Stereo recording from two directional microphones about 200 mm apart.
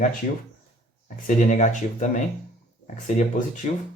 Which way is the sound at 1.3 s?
40° left (ahead or behind).